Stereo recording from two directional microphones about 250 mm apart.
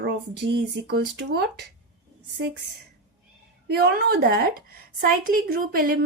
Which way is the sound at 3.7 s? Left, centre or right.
Right.